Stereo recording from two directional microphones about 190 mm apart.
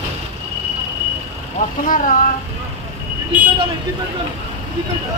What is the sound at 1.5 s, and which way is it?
Speech, 45° left (ahead or behind).